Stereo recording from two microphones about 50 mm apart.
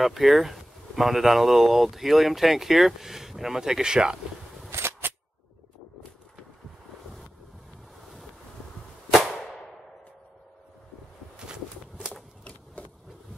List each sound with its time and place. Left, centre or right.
0.0 s speech: centre
4.6 s cap gun: right
11.3 s a sound: centre
12.8 s vehicle: left